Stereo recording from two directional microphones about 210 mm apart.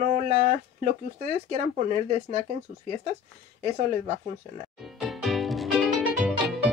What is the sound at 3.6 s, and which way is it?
Speech, 35° right (ahead or behind).